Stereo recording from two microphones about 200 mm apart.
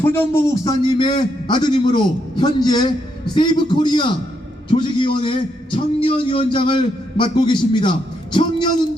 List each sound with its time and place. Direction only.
0.0 s a man's voice: 10° left (ahead or behind)